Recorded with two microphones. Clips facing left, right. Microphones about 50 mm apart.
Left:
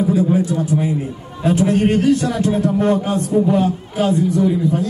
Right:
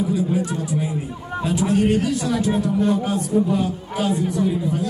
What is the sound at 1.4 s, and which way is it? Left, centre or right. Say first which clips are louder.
A man's voice: left 4 dB; left.